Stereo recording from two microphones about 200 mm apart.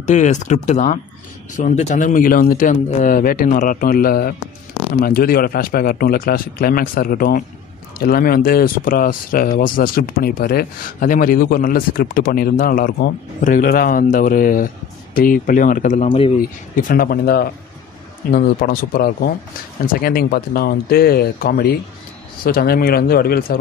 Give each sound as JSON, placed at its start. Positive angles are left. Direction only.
{"t": 0.0, "sound": "speech", "side_deg": 35}